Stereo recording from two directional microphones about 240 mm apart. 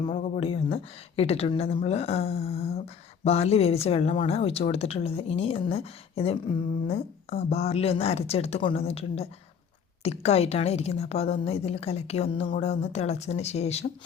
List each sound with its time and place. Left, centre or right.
0.0 s a woman's voice: left